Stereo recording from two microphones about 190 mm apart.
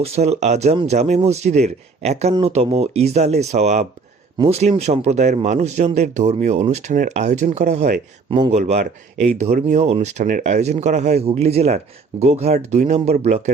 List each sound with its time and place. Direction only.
0.0 s speech: 35° right (ahead or behind)